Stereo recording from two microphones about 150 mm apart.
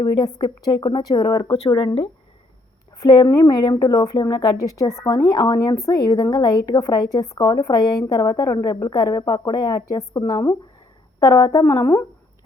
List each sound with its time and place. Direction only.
0.0 s a woman's voice: 30° left (ahead or behind)
3.0 s a woman's voice: 25° left (ahead or behind)